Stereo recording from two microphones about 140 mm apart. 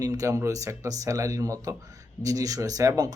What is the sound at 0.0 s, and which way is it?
Speech, 25° right (ahead or behind).